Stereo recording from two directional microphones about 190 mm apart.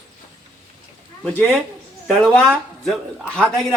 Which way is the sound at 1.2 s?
10° left (ahead or behind).